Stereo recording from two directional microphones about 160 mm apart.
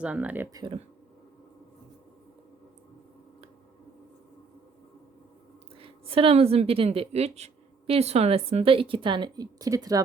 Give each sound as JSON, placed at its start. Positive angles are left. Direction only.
{"t": 0.0, "sound": "speech", "side_deg": -10}
{"t": 0.5, "sound": "speech", "side_deg": -30}
{"t": 5.8, "sound": "a woman's voice", "side_deg": -35}